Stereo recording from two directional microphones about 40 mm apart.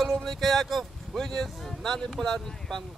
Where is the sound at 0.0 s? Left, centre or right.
Centre.